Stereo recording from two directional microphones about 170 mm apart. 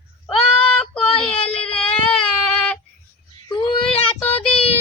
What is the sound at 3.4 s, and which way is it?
Child singing, 25° left (ahead or behind).